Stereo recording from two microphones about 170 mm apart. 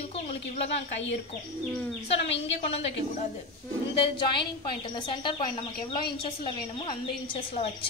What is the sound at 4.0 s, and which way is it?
A woman's voice, 30° left (ahead or behind).